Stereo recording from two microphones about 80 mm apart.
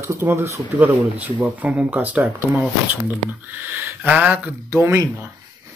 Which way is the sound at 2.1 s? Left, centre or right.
Right.